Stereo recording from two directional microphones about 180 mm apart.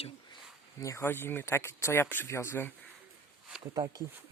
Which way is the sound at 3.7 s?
20° right (ahead or behind).